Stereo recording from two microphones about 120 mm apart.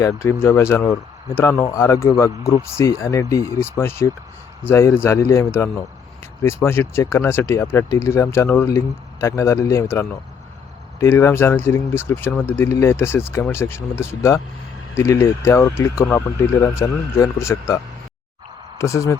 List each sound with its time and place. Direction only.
0.0 s speech: 20° left (ahead or behind)
18.8 s speech: 25° left (ahead or behind)